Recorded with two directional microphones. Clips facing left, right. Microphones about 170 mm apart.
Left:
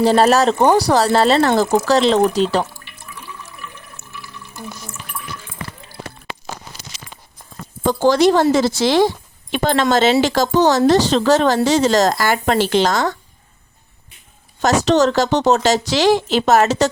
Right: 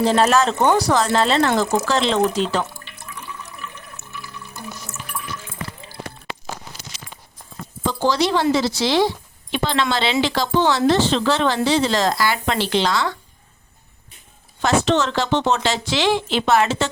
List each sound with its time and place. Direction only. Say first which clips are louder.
0.0 s speech: left 4 dB; 35° left (ahead or behind)
4.0 s water: even; 70° right (ahead or behind)
7.9 s speech: left 6 dB; 50° left (ahead or behind)
14.6 s speech: left 4 dB; 40° left (ahead or behind)